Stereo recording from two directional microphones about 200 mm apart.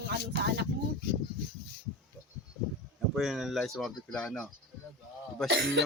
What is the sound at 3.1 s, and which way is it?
Speech, centre (ahead or behind).